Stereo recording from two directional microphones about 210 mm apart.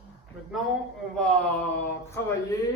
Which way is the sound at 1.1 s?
5° left (ahead or behind).